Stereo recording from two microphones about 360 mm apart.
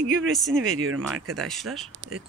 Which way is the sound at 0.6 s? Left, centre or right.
Right.